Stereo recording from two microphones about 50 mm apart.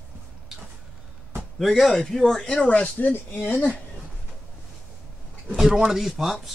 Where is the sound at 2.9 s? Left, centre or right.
Left.